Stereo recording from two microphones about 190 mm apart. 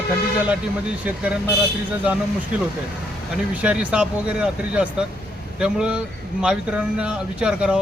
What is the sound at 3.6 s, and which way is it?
Speech, 5° right (ahead or behind).